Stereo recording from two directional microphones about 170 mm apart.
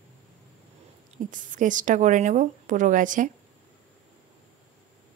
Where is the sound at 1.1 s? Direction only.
50° right (ahead or behind).